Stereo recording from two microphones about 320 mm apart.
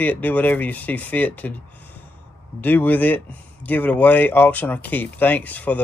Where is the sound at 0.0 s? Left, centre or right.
Centre.